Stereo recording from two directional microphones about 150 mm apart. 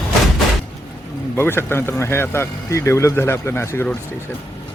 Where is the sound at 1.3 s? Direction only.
15° left (ahead or behind).